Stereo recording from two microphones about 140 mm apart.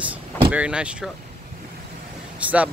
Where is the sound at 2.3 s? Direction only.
10° right (ahead or behind).